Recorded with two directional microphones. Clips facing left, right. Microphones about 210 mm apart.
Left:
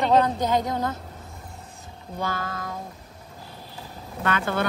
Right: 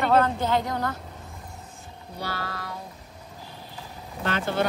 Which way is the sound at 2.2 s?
45° left (ahead or behind).